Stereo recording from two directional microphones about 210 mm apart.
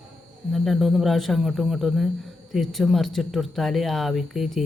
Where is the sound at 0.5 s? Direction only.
Centre (ahead or behind).